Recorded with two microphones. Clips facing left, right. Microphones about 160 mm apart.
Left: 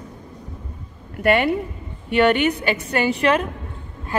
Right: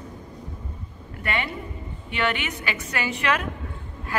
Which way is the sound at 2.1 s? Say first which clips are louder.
Left 10 dB; 40° left (ahead or behind).